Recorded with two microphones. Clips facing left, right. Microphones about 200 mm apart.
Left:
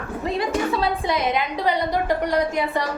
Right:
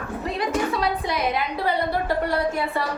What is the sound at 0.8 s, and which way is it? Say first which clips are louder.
A woman's voice: left 2 dB; 25° left (ahead or behind).